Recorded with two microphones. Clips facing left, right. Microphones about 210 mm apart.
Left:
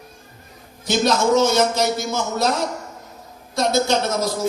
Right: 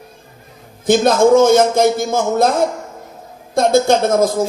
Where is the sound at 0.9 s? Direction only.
50° right (ahead or behind).